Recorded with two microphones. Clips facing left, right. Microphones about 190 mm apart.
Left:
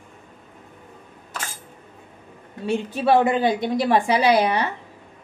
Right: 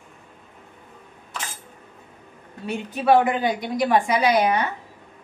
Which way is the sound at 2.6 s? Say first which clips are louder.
Even; 30° left (ahead or behind).